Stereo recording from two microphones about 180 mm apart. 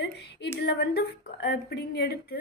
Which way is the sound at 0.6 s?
65° left (ahead or behind).